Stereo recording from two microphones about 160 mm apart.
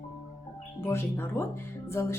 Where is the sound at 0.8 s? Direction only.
15° left (ahead or behind).